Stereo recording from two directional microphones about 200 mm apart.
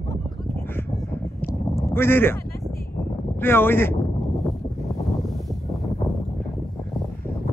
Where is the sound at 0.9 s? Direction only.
15° left (ahead or behind).